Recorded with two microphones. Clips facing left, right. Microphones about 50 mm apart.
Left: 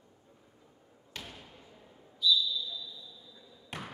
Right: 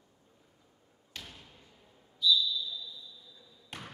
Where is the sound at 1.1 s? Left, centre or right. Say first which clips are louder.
Left 2 dB; centre.